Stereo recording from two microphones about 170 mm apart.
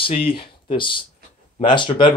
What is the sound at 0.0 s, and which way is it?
Speech, 30° left (ahead or behind).